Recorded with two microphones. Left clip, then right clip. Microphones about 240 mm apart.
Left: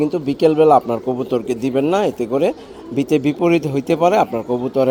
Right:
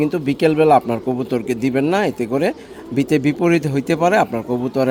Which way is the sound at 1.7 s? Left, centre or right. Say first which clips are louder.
Left 1 dB; right.